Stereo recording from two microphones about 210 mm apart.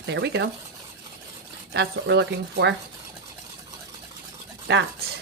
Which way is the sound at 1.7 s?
55° right (ahead or behind).